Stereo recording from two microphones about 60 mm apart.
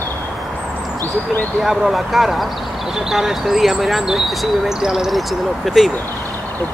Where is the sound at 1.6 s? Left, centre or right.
Centre.